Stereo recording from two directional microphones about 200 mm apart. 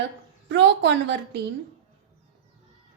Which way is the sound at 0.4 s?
60° right (ahead or behind).